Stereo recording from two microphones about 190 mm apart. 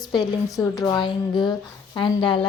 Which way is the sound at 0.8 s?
25° left (ahead or behind).